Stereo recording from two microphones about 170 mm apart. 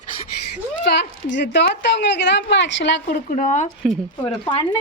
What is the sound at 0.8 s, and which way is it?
A woman's voice, 80° left.